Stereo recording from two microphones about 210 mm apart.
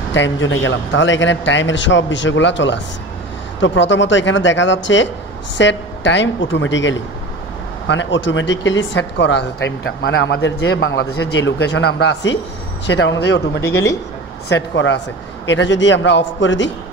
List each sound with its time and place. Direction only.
0.1 s speech: 60° left (ahead or behind)
13.6 s a man's voice: 10° left (ahead or behind)
14.5 s speech: 55° left (ahead or behind)